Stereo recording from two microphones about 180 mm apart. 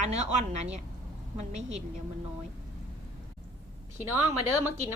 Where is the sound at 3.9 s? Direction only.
10° right (ahead or behind).